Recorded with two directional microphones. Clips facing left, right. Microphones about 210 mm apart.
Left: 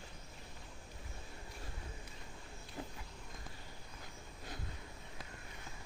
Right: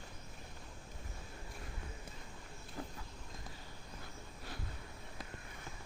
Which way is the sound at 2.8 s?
20° left (ahead or behind).